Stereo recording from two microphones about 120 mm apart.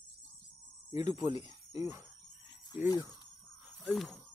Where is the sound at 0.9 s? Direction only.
35° right (ahead or behind).